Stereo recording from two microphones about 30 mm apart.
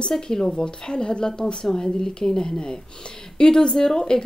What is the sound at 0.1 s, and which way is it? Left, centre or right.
A woman's voice, centre.